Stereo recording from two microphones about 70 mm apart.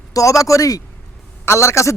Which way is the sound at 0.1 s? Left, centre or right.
Left.